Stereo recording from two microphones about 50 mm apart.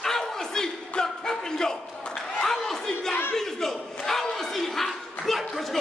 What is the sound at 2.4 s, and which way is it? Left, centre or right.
Crowd, centre.